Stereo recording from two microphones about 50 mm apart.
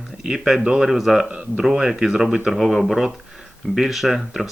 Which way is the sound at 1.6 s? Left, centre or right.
Centre.